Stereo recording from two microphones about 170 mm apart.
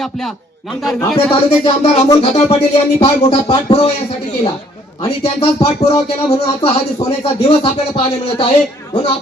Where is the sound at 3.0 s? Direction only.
30° left (ahead or behind).